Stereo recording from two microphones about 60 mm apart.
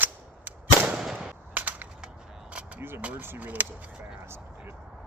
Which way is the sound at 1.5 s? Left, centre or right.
Right.